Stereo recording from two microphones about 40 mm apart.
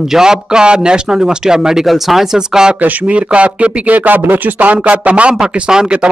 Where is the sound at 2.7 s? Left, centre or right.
Right.